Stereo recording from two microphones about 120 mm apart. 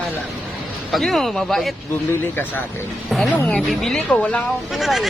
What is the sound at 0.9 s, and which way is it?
Speech, 5° left (ahead or behind).